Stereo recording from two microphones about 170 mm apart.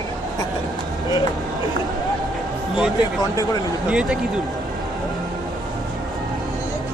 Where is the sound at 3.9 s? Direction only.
5° right (ahead or behind).